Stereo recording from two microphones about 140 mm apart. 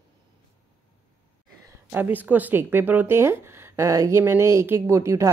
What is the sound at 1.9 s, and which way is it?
Speech, 15° right (ahead or behind).